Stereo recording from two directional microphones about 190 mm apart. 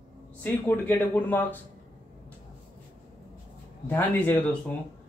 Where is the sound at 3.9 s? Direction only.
10° left (ahead or behind).